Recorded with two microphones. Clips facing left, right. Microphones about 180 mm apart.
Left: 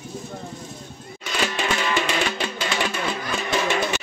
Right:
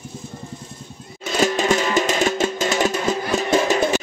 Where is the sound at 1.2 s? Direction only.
40° right (ahead or behind).